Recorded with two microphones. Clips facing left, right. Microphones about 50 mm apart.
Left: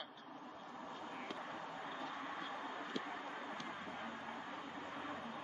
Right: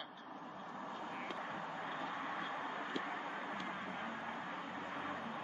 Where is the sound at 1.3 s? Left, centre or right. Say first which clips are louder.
Right 3 dB; right.